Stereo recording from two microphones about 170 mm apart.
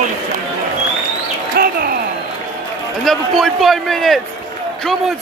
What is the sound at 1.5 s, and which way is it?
Bird, 60° right (ahead or behind).